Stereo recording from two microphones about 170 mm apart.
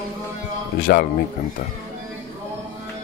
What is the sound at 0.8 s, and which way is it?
Speech, 60° left (ahead or behind).